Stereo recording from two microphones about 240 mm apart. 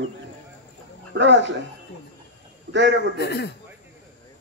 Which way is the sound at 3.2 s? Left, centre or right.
Left.